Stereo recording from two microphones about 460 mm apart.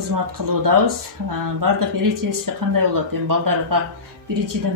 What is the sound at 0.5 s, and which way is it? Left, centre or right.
Speech, right.